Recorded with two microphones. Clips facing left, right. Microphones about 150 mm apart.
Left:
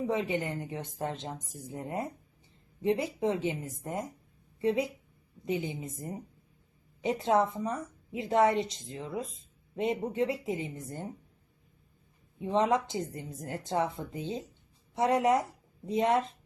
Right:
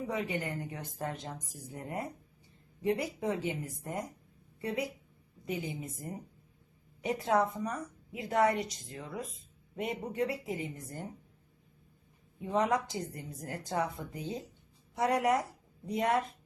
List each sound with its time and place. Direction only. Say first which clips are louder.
0.0 s a woman's voice: left 4 dB; 25° left (ahead or behind)
12.4 s a woman's voice: left 3 dB; 25° left (ahead or behind)